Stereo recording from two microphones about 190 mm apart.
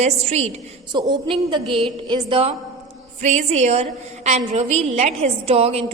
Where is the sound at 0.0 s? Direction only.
35° right (ahead or behind).